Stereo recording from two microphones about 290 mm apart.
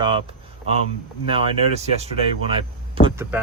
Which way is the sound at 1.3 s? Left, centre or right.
Right.